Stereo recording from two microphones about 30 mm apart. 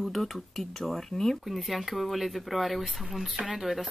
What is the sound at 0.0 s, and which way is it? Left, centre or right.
Speech, centre.